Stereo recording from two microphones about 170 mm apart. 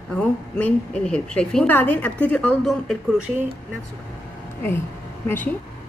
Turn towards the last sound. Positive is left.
turn(degrees=10)  # may be behind; listen again after turning